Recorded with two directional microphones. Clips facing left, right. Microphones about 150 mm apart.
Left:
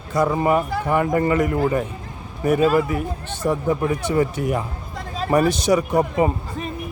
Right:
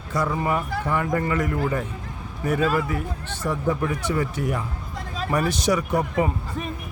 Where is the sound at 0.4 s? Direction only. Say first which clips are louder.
Left 5 dB; 20° left (ahead or behind).